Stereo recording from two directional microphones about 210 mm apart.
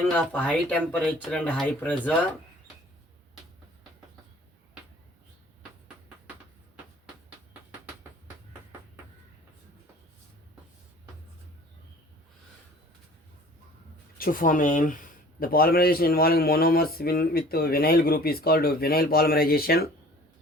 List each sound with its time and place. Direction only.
0.1 s speech: 5° left (ahead or behind)
14.2 s speech: 40° left (ahead or behind)